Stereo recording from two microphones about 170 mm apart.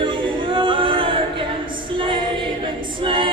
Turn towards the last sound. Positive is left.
turn(degrees=-30)  # may be behind; listen again after turning